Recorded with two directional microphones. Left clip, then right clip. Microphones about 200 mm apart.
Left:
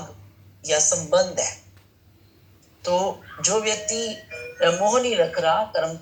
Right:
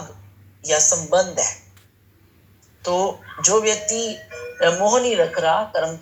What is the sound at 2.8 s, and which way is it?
Speech, 15° right (ahead or behind).